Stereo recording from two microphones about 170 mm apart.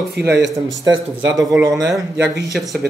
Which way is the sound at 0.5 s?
20° right (ahead or behind).